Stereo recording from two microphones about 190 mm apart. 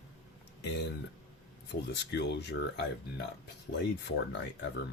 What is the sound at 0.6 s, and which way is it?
Speech, 65° left (ahead or behind).